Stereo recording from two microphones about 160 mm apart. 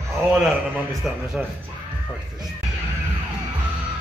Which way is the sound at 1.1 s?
5° right (ahead or behind).